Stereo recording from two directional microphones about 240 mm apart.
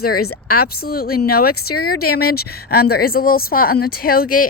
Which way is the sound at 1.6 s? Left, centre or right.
Left.